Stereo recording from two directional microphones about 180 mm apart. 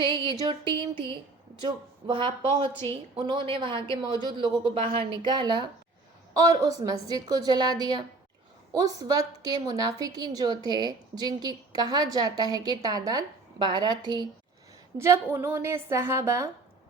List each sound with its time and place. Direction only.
0.1 s a woman's voice: 25° right (ahead or behind)